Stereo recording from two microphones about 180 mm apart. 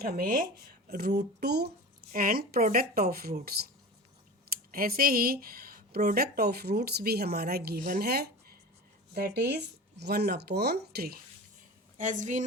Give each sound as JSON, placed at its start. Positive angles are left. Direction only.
{"t": 0.0, "sound": "speech", "side_deg": -60}
{"t": 11.9, "sound": "a woman's voice", "side_deg": -45}